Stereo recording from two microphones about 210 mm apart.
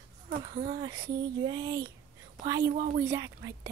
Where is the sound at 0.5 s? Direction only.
20° right (ahead or behind).